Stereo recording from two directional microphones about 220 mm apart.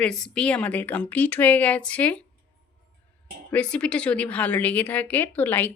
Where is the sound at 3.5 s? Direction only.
5° left (ahead or behind).